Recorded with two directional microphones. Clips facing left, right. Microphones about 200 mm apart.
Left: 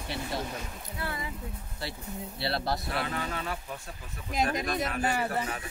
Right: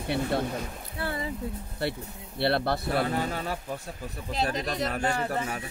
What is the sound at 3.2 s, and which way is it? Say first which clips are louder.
Speech: right 4 dB; 40° right (ahead or behind).